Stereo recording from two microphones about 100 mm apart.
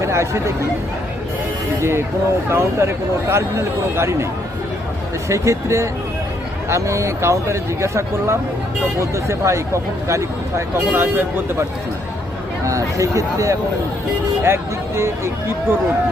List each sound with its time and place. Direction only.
0.0 s speech: 30° right (ahead or behind)
1.8 s speech: 25° right (ahead or behind)
5.3 s speech: 30° right (ahead or behind)
12.6 s speech: 30° right (ahead or behind)